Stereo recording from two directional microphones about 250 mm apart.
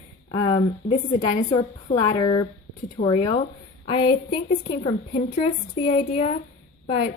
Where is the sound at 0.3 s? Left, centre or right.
Centre.